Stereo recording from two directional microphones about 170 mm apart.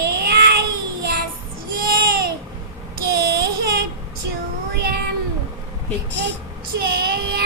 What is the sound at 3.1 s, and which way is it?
Child singing, 65° right (ahead or behind).